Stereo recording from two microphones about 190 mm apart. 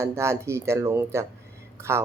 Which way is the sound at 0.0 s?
15° right (ahead or behind).